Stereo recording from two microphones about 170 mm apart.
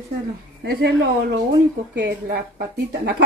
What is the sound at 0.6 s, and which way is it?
A woman's voice, 80° right.